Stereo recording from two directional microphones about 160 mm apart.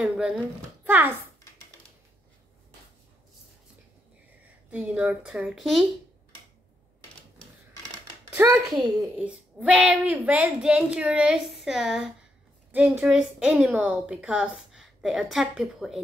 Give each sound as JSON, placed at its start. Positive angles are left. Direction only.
{"t": 0.0, "sound": "a sound", "side_deg": -5}
{"t": 0.8, "sound": "a child's voice", "side_deg": -10}
{"t": 4.6, "sound": "a woman's voice", "side_deg": -5}
{"t": 8.4, "sound": "a child's voice", "side_deg": -15}
{"t": 9.2, "sound": "a woman's voice", "side_deg": -5}